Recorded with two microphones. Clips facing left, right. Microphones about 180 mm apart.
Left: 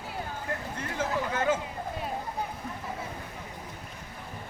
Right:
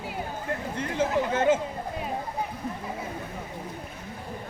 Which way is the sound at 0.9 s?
25° right (ahead or behind).